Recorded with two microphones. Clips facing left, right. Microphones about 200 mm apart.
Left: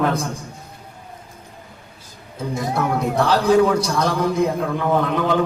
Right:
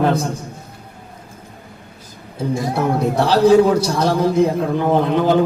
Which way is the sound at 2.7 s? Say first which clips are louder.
Right 1 dB; 30° right (ahead or behind).